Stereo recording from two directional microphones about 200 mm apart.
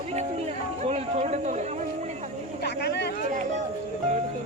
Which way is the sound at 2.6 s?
55° left (ahead or behind).